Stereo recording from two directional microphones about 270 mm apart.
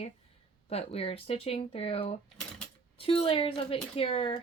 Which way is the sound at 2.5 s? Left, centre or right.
Left.